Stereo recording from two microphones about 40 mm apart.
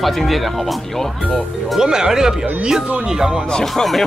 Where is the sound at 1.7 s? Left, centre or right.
Centre.